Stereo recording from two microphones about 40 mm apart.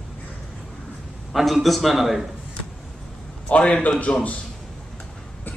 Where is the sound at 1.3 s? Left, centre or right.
Centre.